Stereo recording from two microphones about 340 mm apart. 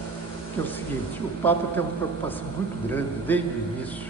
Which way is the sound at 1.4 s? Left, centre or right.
Centre.